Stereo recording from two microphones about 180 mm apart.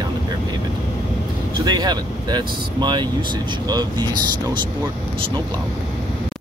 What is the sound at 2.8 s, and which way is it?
Speech, 25° right (ahead or behind).